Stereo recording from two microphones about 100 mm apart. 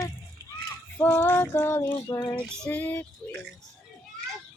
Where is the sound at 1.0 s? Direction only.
20° left (ahead or behind).